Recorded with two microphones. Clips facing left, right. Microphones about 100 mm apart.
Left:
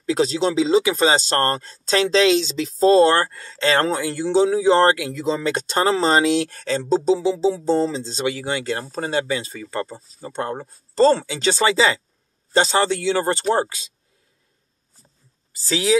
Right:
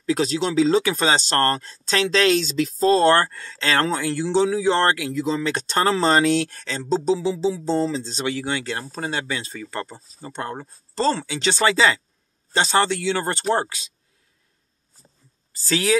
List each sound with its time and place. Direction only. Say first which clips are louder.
0.0 s speech: left 2 dB; 35° left (ahead or behind)
0.7 s speech: left 2 dB; 15° left (ahead or behind)
0.9 s speech: left 2 dB; 30° left (ahead or behind)
5.7 s speech: left 1 dB; 20° left (ahead or behind)
6.6 s speech: left 4 dB; 40° left (ahead or behind)
15.7 s speech: left 2 dB; 20° left (ahead or behind)